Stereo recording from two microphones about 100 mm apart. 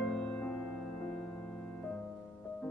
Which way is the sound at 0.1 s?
10° left (ahead or behind).